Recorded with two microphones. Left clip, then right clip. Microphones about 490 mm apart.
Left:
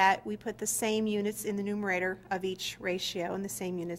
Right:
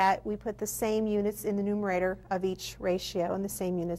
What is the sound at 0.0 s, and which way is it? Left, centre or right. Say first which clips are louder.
A woman's voice: even; right.